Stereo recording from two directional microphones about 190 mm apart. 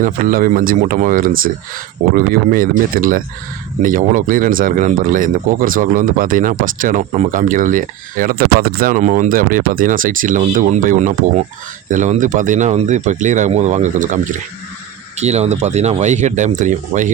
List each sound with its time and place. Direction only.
0.0 s speech: 45° right (ahead or behind)
15.2 s speech: 35° right (ahead or behind)